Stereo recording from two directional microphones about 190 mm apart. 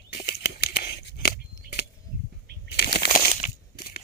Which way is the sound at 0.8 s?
50° left (ahead or behind).